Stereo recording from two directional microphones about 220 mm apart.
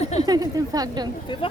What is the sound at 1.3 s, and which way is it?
Speech, 20° left (ahead or behind).